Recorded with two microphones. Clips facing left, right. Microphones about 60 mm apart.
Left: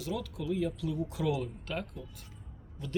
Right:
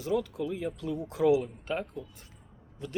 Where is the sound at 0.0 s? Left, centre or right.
Right.